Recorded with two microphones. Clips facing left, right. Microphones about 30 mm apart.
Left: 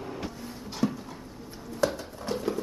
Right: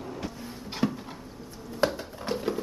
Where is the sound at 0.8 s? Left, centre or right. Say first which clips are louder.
Even; right.